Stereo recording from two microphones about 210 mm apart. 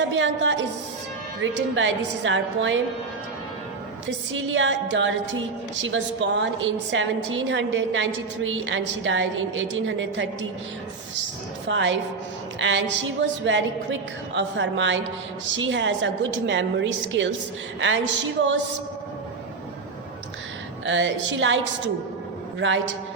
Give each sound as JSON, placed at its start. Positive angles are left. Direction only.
{"t": 0.1, "sound": "a woman's voice", "side_deg": -60}
{"t": 4.3, "sound": "a woman's voice", "side_deg": -65}
{"t": 11.7, "sound": "a woman's voice", "side_deg": -60}
{"t": 20.8, "sound": "a woman's voice", "side_deg": -60}